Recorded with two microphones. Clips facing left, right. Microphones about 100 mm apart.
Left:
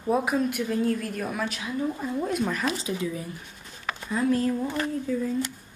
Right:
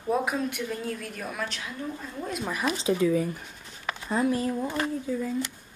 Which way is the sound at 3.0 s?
85° right.